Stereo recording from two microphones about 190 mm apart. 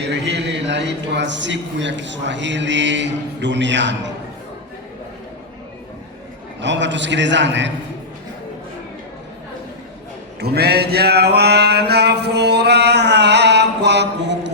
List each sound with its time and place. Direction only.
0.1 s a man's voice: 65° right (ahead or behind)
6.6 s a man's voice: 70° right (ahead or behind)
10.4 s a sound: 55° right (ahead or behind)